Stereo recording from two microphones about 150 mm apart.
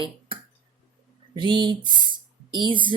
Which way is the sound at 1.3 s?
30° right (ahead or behind).